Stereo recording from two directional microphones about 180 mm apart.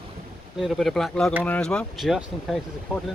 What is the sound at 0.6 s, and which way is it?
Speech, centre (ahead or behind).